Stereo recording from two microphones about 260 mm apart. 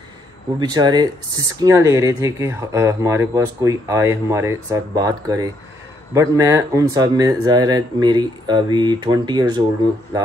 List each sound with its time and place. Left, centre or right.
0.6 s speech: centre